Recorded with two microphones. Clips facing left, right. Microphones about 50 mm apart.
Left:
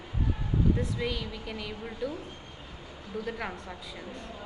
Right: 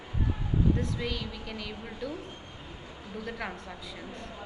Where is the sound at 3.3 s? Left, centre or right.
Centre.